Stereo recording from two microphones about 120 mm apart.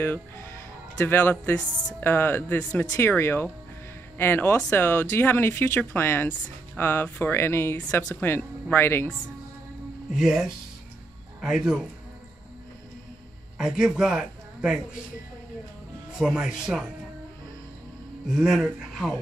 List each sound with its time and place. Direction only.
0.0 s speech: 20° left (ahead or behind)
10.1 s speech: 5° right (ahead or behind)
13.6 s speech: 5° right (ahead or behind)
16.2 s speech: 5° right (ahead or behind)
18.3 s speech: centre (ahead or behind)